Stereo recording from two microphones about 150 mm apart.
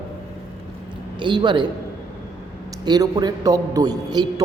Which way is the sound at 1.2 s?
30° right (ahead or behind).